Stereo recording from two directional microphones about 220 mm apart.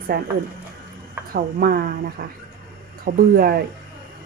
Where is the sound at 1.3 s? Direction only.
45° right (ahead or behind).